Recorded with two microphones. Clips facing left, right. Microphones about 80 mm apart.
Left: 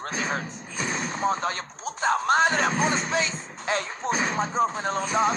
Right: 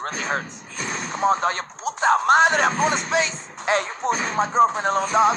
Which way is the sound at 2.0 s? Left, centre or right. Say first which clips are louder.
Right 5 dB; right.